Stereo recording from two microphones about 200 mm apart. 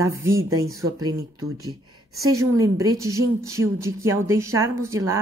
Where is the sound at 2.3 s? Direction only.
15° right (ahead or behind).